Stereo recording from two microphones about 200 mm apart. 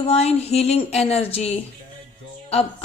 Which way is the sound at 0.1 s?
30° left (ahead or behind).